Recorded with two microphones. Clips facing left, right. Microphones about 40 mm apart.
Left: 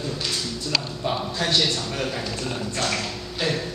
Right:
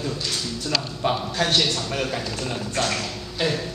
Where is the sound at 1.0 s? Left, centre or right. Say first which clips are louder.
Right 4 dB; right.